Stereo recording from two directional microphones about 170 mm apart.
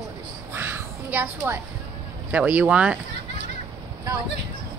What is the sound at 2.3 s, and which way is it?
Speech, 10° right (ahead or behind).